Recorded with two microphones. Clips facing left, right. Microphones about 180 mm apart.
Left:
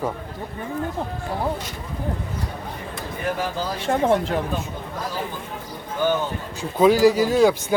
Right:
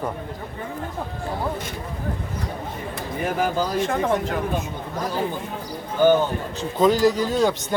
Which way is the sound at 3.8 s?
30° left (ahead or behind).